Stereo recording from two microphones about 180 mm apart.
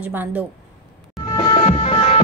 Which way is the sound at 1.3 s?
30° left (ahead or behind).